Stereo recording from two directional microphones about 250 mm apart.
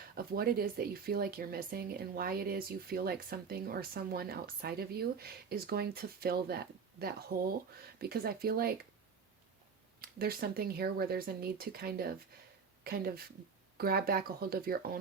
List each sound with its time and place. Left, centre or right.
0.2 s speech: right
7.9 s speech: right
10.0 s speech: right